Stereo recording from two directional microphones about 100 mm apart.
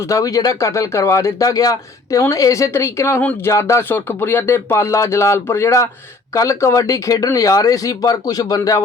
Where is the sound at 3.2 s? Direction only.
15° left (ahead or behind).